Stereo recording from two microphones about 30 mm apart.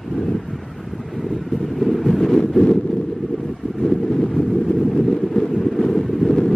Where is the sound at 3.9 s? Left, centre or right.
Centre.